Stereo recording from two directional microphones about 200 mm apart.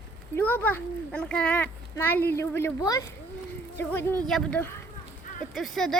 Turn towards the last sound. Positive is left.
turn(degrees=0)  # may be behind; listen again after turning